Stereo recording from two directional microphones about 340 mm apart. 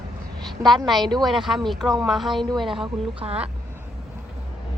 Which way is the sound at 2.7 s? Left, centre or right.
Centre.